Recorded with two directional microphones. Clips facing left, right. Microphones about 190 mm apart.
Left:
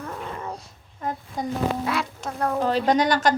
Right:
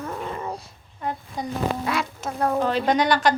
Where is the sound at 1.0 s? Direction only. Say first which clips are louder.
Even; 40° left (ahead or behind).